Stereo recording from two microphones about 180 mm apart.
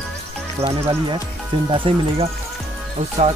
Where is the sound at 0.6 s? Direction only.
30° right (ahead or behind).